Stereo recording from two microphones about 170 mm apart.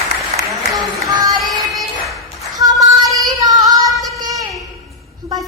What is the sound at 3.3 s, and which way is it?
Female singing, 20° right (ahead or behind).